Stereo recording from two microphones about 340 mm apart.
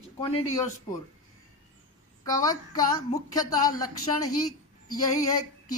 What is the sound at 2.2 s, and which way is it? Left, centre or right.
A woman's voice, centre.